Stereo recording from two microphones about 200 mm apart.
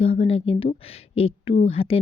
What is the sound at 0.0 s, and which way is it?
Speech, 30° left (ahead or behind).